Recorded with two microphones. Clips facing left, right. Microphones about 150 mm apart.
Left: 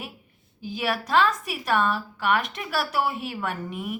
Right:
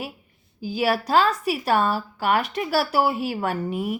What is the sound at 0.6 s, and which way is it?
Speech, 35° right (ahead or behind).